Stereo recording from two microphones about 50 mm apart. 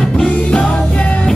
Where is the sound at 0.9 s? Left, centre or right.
Left.